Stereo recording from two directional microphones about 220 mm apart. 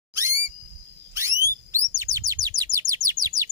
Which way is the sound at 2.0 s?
15° right (ahead or behind).